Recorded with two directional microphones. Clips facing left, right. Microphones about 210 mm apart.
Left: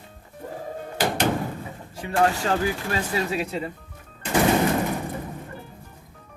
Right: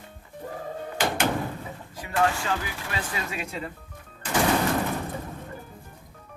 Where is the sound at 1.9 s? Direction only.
30° left (ahead or behind).